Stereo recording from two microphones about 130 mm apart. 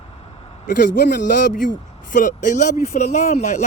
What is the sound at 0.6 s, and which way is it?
Speech, 90° left.